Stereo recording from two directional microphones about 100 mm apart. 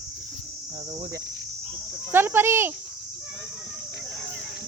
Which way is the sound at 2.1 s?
20° right (ahead or behind).